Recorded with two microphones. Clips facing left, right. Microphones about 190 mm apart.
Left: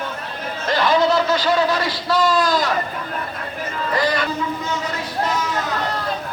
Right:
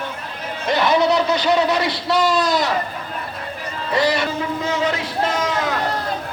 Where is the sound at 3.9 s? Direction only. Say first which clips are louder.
Right 2 dB; 25° right (ahead or behind).